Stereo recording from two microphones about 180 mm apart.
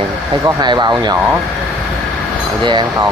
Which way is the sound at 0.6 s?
25° right (ahead or behind).